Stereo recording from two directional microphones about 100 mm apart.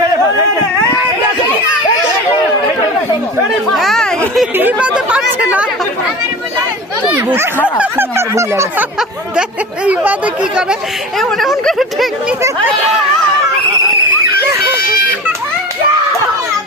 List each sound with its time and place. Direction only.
3.8 s a sound: 5° left (ahead or behind)
4.5 s speech: 15° right (ahead or behind)
7.8 s speech: 25° right (ahead or behind)
9.8 s speech: 15° right (ahead or behind)
11.2 s speech: centre (ahead or behind)